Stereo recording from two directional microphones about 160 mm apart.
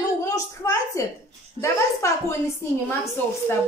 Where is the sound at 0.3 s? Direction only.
20° left (ahead or behind).